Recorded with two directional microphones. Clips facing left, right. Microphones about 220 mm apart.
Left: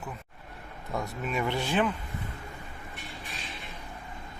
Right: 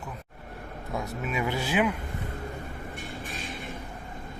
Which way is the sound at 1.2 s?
5° right (ahead or behind).